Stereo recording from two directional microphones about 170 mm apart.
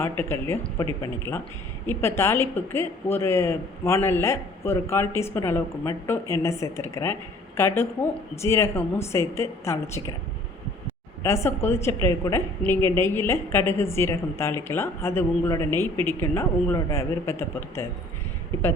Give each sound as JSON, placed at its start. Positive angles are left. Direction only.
{"t": 0.0, "sound": "a woman's voice", "side_deg": 15}
{"t": 11.2, "sound": "a woman's voice", "side_deg": 15}